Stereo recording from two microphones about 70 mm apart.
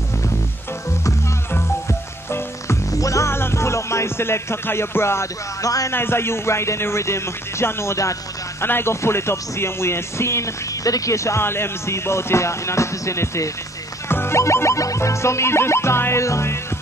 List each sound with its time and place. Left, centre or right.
1.5 s music: left
5.6 s a man's voice: left
5.9 s speech: left
8.6 s speech: left